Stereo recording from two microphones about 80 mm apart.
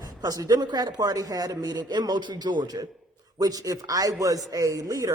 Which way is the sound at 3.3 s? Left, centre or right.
Right.